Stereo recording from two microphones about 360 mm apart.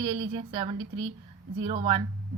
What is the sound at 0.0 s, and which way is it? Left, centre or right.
Speech, centre.